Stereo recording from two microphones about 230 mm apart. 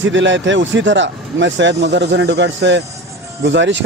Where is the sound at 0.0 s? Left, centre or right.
Right.